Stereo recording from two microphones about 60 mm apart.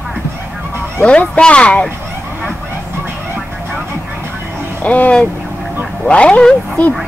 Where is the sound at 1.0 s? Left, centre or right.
Left.